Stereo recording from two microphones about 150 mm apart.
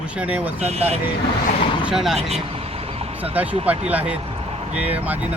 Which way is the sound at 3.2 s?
10° right (ahead or behind).